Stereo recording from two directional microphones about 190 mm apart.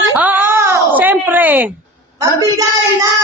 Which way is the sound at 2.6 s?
20° right (ahead or behind).